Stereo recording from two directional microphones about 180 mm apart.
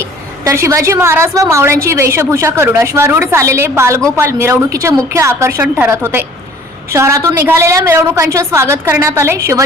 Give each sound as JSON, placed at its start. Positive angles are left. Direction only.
{"t": 0.4, "sound": "a woman's voice", "side_deg": -15}